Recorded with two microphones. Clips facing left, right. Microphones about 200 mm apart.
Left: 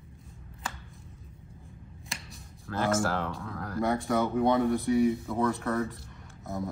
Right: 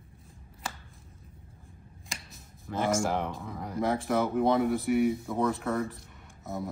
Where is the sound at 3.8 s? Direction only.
Centre (ahead or behind).